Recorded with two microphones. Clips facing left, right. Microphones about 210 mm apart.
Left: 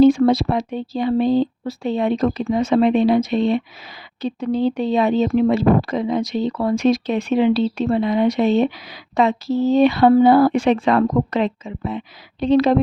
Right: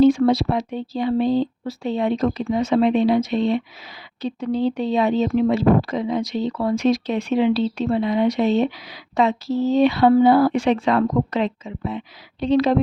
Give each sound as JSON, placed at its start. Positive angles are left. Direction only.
{"t": 0.0, "sound": "speech", "side_deg": 50}
{"t": 9.7, "sound": "speech", "side_deg": 50}